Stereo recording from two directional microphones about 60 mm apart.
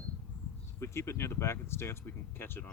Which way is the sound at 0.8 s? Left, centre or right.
Left.